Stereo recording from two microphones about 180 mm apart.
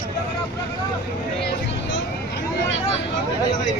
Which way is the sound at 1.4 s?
70° left (ahead or behind).